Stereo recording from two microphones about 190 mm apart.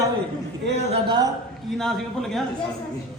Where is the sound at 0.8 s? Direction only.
30° right (ahead or behind).